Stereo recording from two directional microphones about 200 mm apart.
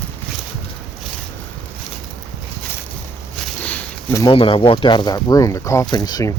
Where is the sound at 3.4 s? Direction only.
5° left (ahead or behind).